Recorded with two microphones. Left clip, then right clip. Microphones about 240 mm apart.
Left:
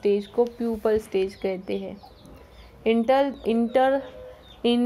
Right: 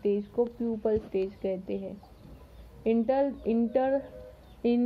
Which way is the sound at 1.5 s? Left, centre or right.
Left.